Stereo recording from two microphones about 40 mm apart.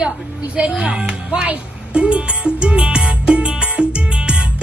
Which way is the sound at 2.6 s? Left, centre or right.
Right.